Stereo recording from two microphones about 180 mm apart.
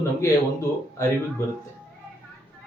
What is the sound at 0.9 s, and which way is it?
Speech, 15° left (ahead or behind).